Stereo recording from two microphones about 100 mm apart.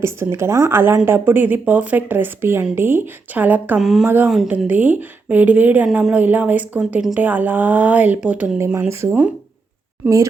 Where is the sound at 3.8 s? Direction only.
5° right (ahead or behind).